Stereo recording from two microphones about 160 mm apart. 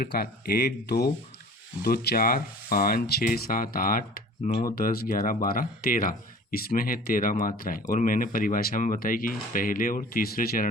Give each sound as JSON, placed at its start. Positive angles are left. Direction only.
{"t": 0.0, "sound": "speech", "side_deg": 70}